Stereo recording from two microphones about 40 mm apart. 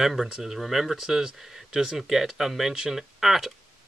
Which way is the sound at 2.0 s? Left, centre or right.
Centre.